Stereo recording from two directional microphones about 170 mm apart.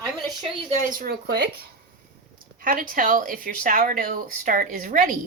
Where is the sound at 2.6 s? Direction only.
55° right (ahead or behind).